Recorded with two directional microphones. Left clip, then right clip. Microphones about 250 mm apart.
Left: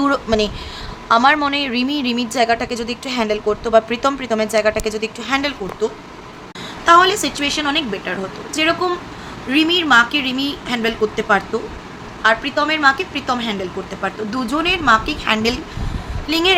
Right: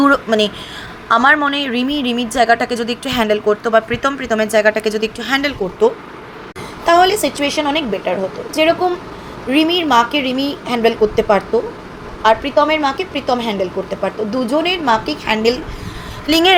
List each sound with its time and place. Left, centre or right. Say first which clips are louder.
0.0 s a woman's voice: right 4 dB; centre
6.8 s a woman's voice: even; centre
16.3 s a woman's voice: right 5 dB; right